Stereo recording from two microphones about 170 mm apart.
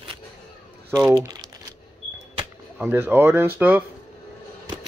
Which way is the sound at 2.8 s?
10° right (ahead or behind).